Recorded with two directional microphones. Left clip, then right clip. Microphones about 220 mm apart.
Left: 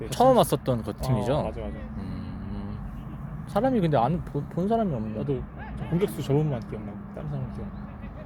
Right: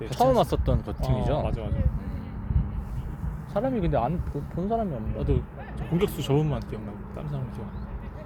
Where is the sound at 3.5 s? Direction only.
30° left (ahead or behind).